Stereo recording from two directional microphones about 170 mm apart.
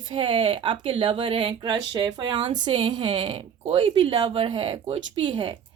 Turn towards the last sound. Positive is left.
turn(degrees=-30)  # may be behind; listen again after turning